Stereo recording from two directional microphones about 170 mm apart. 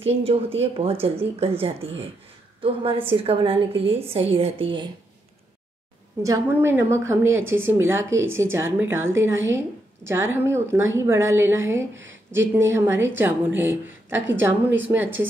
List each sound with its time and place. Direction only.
0.0 s a woman's voice: 35° right (ahead or behind)
6.2 s a woman's voice: 15° right (ahead or behind)
11.9 s speech: 90° right
12.3 s a woman's voice: 15° right (ahead or behind)